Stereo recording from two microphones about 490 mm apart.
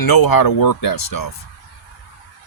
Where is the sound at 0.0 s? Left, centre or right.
Left.